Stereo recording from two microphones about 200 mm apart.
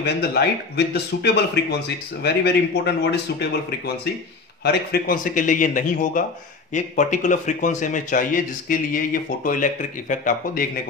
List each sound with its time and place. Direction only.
0.0 s a man's voice: 55° left (ahead or behind); by 10.6 s 40° left (ahead or behind)